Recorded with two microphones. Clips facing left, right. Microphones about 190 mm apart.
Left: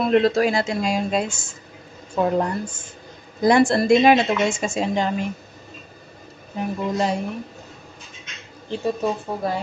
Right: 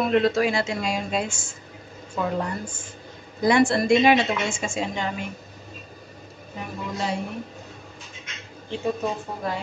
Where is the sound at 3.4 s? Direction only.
35° left (ahead or behind).